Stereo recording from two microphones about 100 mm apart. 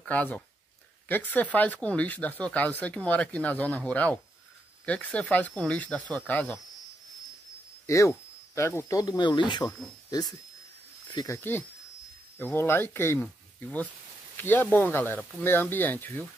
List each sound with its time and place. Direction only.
0.0 s speech: 15° left (ahead or behind)
7.8 s speech: 30° left (ahead or behind); by 9.7 s 50° left (ahead or behind)
11.2 s speech: 25° left (ahead or behind)